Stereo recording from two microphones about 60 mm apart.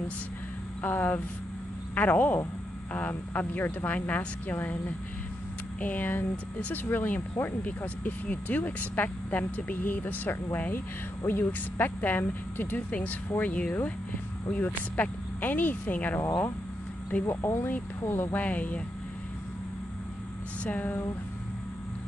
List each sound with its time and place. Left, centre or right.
0.8 s speech: left
13.4 s speech: centre
17.3 s speech: left
17.6 s speech: left
18.4 s speech: left
20.6 s speech: left